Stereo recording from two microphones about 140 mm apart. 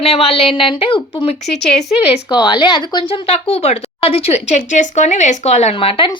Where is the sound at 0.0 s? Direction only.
45° left (ahead or behind).